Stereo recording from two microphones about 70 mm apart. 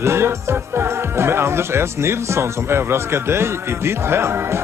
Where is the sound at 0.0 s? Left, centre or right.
Right.